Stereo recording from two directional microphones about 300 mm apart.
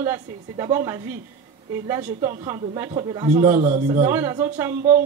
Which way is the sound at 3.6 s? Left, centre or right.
Right.